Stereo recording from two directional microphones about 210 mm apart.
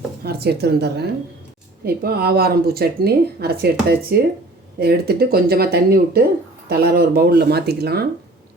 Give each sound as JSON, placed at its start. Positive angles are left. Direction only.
{"t": 0.2, "sound": "speech", "side_deg": -50}